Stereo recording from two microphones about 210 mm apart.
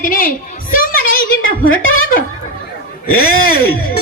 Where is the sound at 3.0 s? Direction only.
45° left (ahead or behind).